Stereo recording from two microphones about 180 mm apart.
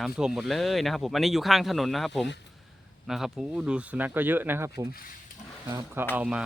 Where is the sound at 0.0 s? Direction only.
5° right (ahead or behind).